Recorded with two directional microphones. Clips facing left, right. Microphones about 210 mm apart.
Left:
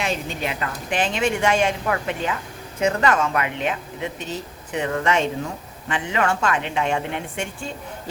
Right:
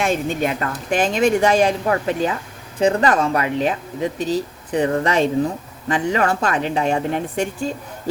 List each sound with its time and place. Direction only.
0.0 s speech: 45° right (ahead or behind)